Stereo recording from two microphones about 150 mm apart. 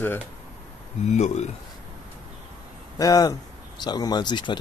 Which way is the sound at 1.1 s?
50° left (ahead or behind).